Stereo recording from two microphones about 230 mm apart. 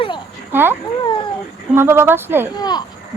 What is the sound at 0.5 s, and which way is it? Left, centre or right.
Speech, centre.